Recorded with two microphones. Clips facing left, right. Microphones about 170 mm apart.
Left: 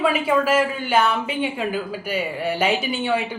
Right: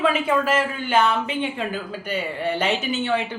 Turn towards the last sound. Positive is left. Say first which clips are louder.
# left 1 dB
turn(degrees=10)  # may be behind; listen again after turning